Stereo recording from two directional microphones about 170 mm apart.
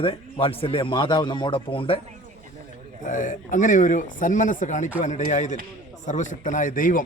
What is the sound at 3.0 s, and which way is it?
Speech, 50° left (ahead or behind).